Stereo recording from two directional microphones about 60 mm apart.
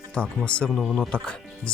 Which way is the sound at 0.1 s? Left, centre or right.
Centre.